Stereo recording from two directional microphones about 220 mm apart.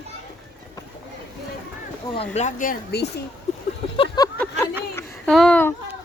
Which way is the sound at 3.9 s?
25° left (ahead or behind).